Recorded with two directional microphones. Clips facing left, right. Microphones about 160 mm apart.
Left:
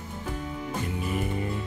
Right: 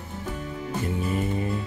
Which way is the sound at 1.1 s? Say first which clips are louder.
Right 3 dB; 25° right (ahead or behind).